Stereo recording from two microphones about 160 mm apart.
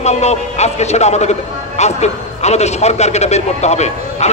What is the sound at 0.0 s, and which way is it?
A man's voice, 45° left (ahead or behind).